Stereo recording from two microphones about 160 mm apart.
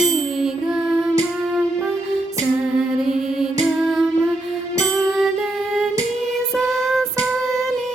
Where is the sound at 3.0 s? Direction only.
5° right (ahead or behind).